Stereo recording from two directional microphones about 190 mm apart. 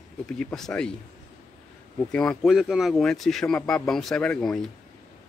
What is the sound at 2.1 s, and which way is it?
Speech, 5° left (ahead or behind).